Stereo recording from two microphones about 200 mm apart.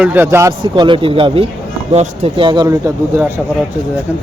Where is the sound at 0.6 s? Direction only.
25° right (ahead or behind).